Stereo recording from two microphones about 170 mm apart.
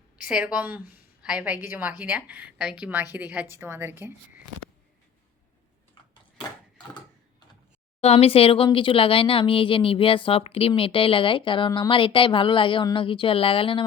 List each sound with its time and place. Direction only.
0.3 s a woman's voice: 5° right (ahead or behind)
8.0 s speech: 35° left (ahead or behind)